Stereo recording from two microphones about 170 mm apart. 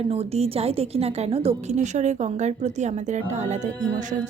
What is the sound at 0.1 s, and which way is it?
A woman's voice, 35° right (ahead or behind).